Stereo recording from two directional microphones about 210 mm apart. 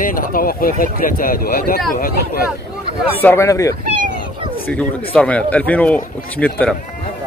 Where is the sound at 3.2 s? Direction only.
10° left (ahead or behind).